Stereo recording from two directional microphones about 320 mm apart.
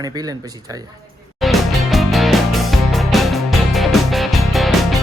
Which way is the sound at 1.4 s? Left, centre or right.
Centre.